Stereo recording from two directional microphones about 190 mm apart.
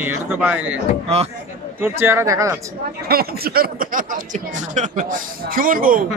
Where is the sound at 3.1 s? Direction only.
55° right (ahead or behind).